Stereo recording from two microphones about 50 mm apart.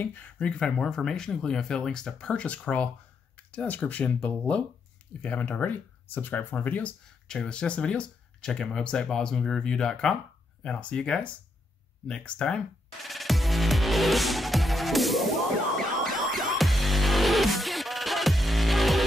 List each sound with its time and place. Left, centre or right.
0.0 s speech: left
0.6 s speech: centre; by 6.9 s left
7.2 s speech: centre
13.0 s music: centre